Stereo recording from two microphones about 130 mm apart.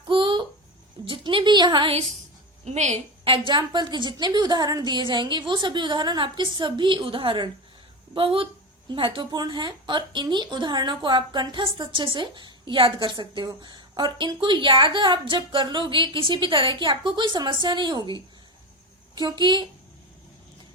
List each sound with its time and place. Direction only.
0.1 s a sound: 40° right (ahead or behind)
1.0 s a woman's voice: 40° right (ahead or behind)
2.6 s a woman's voice: 60° right (ahead or behind)
3.2 s a woman's voice: 40° right (ahead or behind)
19.1 s a woman's voice: 35° right (ahead or behind)